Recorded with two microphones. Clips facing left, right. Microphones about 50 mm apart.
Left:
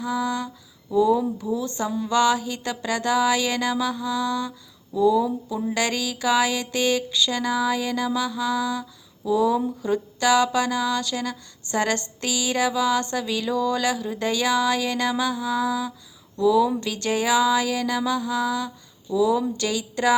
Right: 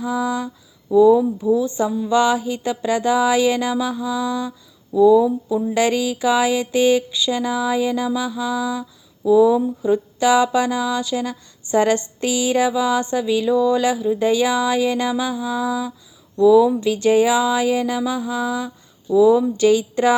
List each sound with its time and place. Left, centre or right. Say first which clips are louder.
0.0 s a sound: right 3 dB; right
1.4 s speech: right 8 dB; centre
1.9 s mantra: right 4 dB; centre
2.1 s speech: right 3 dB; right
4.9 s mantra: right 7 dB; centre
5.7 s speech: right 7 dB; right
9.2 s mantra: right 7 dB; centre
9.8 s speech: right 5 dB; right
15.2 s mantra: right 1 dB; centre
16.8 s speech: right 9 dB; right